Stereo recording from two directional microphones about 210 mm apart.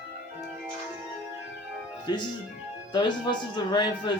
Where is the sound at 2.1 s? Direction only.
20° left (ahead or behind).